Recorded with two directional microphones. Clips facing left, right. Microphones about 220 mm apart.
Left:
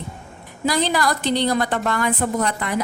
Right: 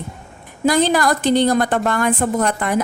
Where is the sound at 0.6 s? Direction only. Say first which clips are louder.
Right 5 dB; 50° right (ahead or behind).